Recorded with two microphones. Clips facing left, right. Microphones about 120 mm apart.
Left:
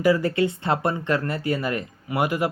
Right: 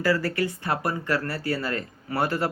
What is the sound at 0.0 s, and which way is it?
Speech, 20° left (ahead or behind).